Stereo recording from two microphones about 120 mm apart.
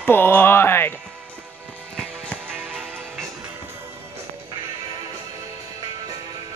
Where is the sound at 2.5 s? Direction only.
15° right (ahead or behind).